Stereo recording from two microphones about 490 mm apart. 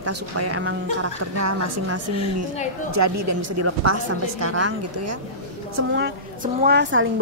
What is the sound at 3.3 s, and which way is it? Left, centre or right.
A woman's voice, right.